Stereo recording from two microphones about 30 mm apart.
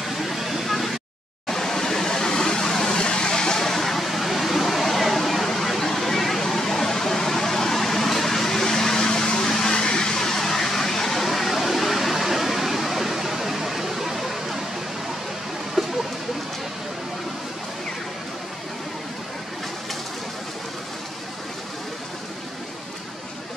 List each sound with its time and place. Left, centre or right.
0.0 s vehicle: centre
1.5 s waterfall: centre
2.9 s vehicle: left
3.5 s vehicle: centre
4.0 s a sound: centre
15.8 s a sound: centre